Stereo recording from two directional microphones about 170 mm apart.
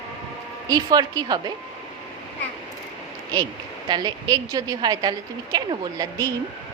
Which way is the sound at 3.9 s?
25° right (ahead or behind).